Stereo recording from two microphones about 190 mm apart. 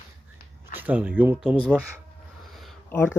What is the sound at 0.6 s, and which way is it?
Speech, 10° right (ahead or behind).